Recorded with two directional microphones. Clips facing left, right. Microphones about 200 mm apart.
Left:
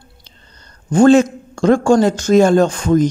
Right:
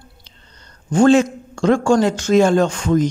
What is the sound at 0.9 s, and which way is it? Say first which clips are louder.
A man's voice: left 3 dB; 45° left (ahead or behind).